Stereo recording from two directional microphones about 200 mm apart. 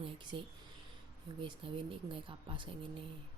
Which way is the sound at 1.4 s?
25° right (ahead or behind).